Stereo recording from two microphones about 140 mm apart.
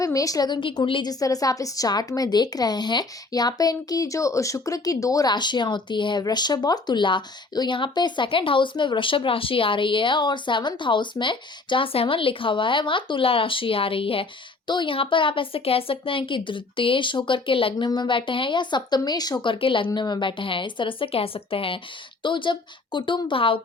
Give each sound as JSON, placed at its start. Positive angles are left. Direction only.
{"t": 0.0, "sound": "a woman's voice", "side_deg": 25}